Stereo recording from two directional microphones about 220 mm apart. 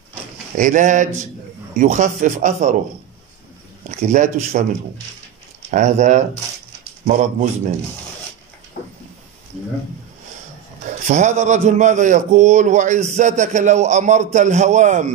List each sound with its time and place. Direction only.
0.6 s a man's voice: 35° right (ahead or behind)
3.8 s a man's voice: 35° right (ahead or behind)
5.7 s a man's voice: 35° right (ahead or behind)
8.8 s a sound: 40° left (ahead or behind)
10.9 s a man's voice: 30° right (ahead or behind)